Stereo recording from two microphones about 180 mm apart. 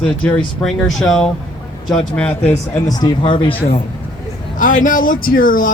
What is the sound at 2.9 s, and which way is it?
Speech, 20° left (ahead or behind).